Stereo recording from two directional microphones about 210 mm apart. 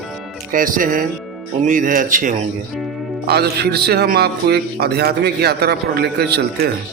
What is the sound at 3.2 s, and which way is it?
A man's voice, 50° right (ahead or behind).